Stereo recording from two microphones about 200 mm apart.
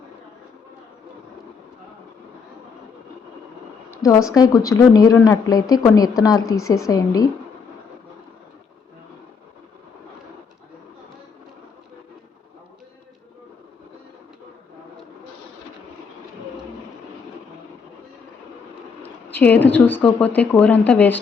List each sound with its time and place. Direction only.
4.0 s speech: 15° left (ahead or behind)
6.4 s speech: 90° left
6.7 s speech: 15° left (ahead or behind)
19.0 s speech: 10° left (ahead or behind)